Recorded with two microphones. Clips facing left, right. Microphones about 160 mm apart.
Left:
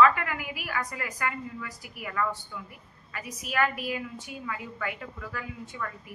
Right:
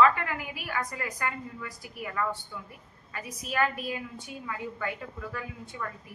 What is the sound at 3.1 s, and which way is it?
A woman's voice, 30° right (ahead or behind).